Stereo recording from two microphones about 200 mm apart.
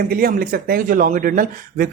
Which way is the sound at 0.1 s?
45° right (ahead or behind).